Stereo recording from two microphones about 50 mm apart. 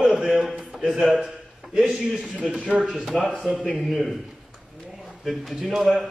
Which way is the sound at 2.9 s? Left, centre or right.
Centre.